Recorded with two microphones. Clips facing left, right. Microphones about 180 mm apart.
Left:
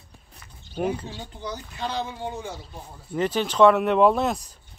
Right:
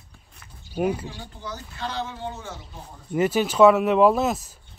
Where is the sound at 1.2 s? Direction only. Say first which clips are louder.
Left 2 dB; 20° left (ahead or behind).